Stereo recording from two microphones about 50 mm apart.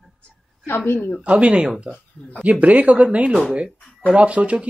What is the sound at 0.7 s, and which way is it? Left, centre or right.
Speech, left.